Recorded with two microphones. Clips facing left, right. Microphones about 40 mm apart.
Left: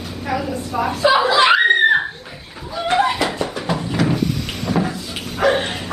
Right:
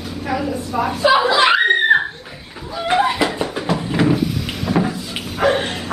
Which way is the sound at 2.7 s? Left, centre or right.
Centre.